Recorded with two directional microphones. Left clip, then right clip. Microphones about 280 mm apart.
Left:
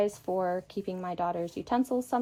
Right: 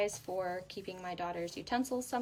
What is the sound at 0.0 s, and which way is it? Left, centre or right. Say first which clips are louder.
Speech: left 6 dB; centre.